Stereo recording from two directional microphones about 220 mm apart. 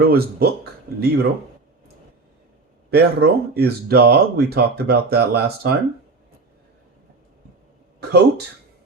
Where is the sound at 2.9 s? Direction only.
45° right (ahead or behind).